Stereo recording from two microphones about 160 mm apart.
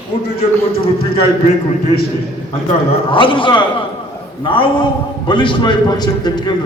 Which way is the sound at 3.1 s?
30° left (ahead or behind).